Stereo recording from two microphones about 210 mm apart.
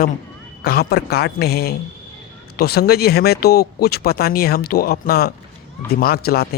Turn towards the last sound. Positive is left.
turn(degrees=50)  # may be behind; listen again after turning